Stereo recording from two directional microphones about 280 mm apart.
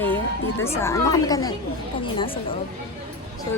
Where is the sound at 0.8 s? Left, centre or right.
Centre.